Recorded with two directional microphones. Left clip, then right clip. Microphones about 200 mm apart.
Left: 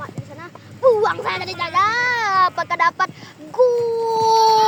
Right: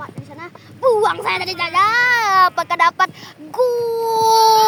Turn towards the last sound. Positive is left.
turn(degrees=-50)  # may be behind; listen again after turning